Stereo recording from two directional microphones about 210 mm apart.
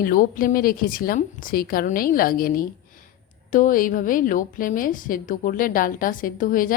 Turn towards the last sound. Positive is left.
turn(degrees=40)  # may be behind; listen again after turning